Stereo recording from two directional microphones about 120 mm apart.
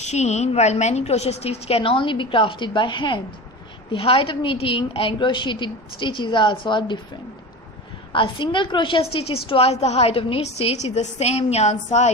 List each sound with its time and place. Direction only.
0.0 s a woman's voice: 70° left (ahead or behind); by 7.0 s 40° left (ahead or behind)
8.1 s a woman's voice: 45° left (ahead or behind); by 12.1 s 75° left (ahead or behind)